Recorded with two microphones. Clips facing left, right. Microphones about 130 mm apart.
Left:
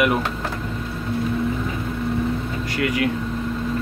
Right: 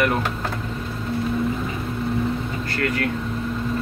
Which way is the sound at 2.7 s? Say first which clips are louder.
Left 3 dB; 15° left (ahead or behind).